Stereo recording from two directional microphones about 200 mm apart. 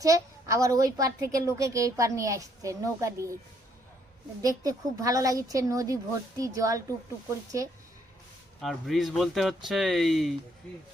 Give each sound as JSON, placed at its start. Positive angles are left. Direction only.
{"t": 0.0, "sound": "a woman's voice", "side_deg": -15}
{"t": 4.4, "sound": "a woman's voice", "side_deg": -20}
{"t": 8.6, "sound": "speech", "side_deg": 0}